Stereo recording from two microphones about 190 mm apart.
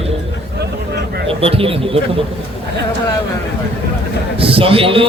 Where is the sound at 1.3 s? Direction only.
30° right (ahead or behind).